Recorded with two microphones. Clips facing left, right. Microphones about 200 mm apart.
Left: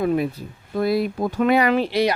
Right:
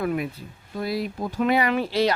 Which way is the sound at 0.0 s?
30° left (ahead or behind).